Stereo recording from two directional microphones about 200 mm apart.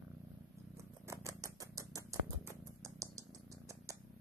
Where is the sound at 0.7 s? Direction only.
15° right (ahead or behind).